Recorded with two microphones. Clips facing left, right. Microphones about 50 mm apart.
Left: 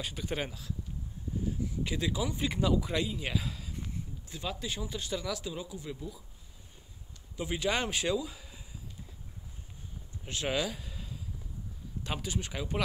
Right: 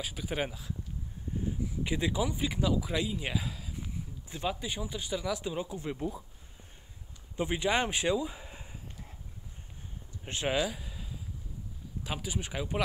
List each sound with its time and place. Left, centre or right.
0.0 s speech: centre
1.8 s speech: centre
2.3 s speech: centre
4.3 s speech: centre
5.4 s speech: right
5.9 s speech: right
7.3 s a sound: right
10.2 s speech: right
10.6 s a sound: centre
12.0 s speech: centre